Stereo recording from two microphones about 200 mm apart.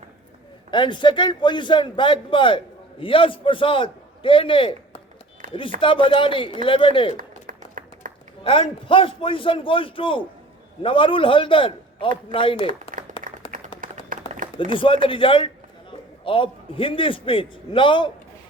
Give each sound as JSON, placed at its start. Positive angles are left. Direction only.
{"t": 0.7, "sound": "a man's voice", "side_deg": 25}
{"t": 5.4, "sound": "a sound", "side_deg": -45}
{"t": 5.8, "sound": "a man's voice", "side_deg": 25}
{"t": 7.2, "sound": "clapping", "side_deg": -45}
{"t": 8.4, "sound": "a man's voice", "side_deg": 25}
{"t": 12.9, "sound": "a sound", "side_deg": -40}
{"t": 13.4, "sound": "clapping", "side_deg": 25}
{"t": 13.8, "sound": "a sound", "side_deg": -45}
{"t": 15.0, "sound": "a man's voice", "side_deg": 25}